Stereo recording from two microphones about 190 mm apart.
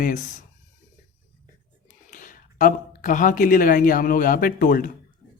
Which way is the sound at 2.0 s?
45° left (ahead or behind).